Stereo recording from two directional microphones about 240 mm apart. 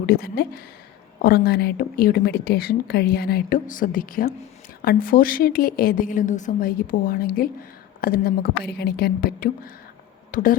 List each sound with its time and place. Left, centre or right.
0.0 s speech: left